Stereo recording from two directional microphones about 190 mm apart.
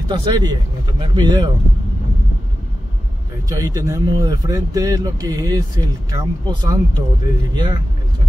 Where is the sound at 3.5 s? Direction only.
20° right (ahead or behind).